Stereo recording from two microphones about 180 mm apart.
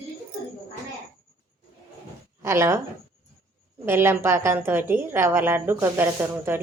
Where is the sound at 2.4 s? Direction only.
15° right (ahead or behind).